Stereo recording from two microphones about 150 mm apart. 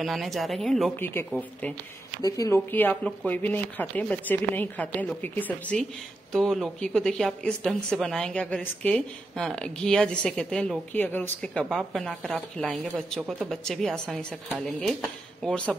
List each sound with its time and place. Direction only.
0.0 s a woman's voice: centre (ahead or behind)
0.9 s speech: 15° left (ahead or behind)
2.2 s a woman's voice: 25° left (ahead or behind); by 14.4 s 5° left (ahead or behind)
15.4 s speech: 5° left (ahead or behind)